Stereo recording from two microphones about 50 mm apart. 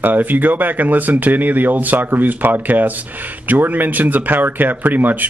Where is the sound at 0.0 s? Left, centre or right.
Right.